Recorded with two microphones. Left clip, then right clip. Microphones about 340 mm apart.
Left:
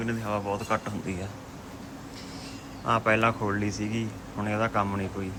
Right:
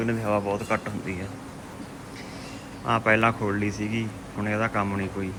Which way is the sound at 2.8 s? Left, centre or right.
Centre.